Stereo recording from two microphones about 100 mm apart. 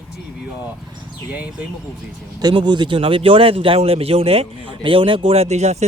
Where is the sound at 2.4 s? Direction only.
50° right (ahead or behind).